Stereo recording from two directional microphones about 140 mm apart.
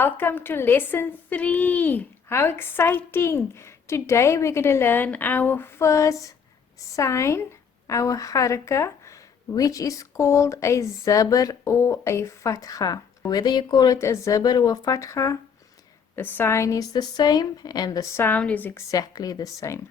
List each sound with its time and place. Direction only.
0.0 s speech: 15° left (ahead or behind)